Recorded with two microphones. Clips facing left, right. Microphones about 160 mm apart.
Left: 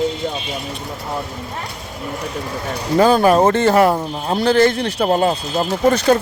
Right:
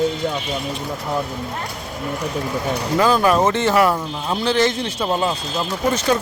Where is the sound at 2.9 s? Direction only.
30° left (ahead or behind).